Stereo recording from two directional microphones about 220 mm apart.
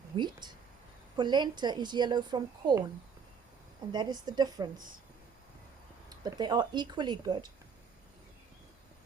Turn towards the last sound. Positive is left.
turn(degrees=-20)  # may be behind; listen again after turning